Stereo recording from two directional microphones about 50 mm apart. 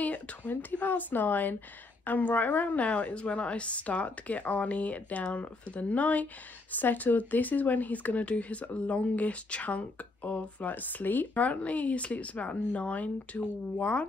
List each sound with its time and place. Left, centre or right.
0.0 s a woman's voice: left